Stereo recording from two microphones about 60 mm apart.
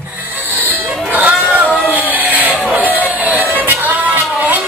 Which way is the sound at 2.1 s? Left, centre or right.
Right.